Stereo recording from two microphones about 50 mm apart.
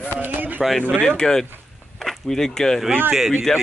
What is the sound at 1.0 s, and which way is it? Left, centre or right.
Speech, centre.